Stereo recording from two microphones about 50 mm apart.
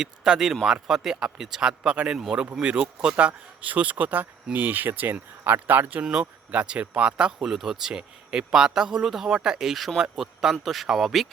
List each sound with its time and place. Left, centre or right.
0.0 s speech: centre
3.2 s speech: right
6.1 s speech: right
7.5 s speech: centre